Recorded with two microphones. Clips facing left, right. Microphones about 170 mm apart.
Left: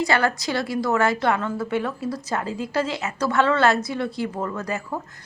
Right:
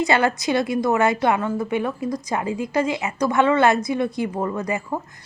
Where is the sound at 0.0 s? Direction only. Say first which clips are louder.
Right 2 dB; 20° right (ahead or behind).